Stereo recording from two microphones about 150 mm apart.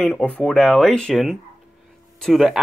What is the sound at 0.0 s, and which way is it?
Speech, 5° left (ahead or behind).